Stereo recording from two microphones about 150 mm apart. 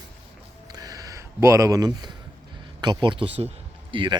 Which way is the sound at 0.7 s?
25° right (ahead or behind).